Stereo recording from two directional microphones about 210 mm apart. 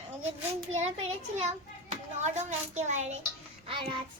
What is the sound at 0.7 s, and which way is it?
A child's voice, 30° right (ahead or behind).